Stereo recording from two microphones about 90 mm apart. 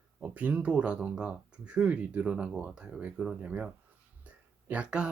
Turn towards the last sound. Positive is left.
turn(degrees=-10)  # may be behind; listen again after turning